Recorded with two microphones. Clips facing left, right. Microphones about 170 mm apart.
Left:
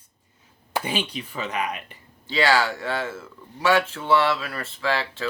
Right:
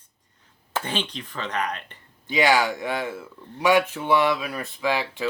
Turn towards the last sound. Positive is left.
turn(degrees=-15)  # may be behind; listen again after turning